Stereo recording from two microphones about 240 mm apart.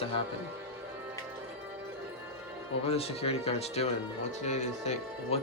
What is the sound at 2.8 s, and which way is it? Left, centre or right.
Speech, left.